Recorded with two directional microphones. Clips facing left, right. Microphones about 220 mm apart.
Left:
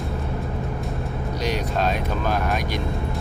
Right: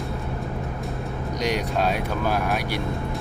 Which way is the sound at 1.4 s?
10° right (ahead or behind).